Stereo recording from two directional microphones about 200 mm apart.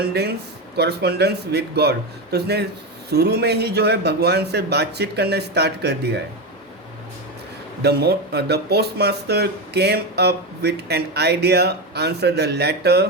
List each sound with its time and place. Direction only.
0.0 s speech: 55° right (ahead or behind)
7.8 s speech: 55° right (ahead or behind)